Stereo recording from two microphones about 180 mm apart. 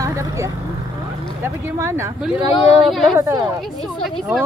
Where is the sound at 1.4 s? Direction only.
15° right (ahead or behind).